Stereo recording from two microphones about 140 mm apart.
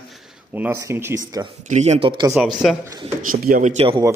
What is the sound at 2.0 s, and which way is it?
Speech, 30° right (ahead or behind).